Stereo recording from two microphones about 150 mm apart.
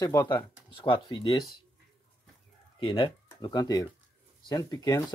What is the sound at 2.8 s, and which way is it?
Speech, 35° left (ahead or behind).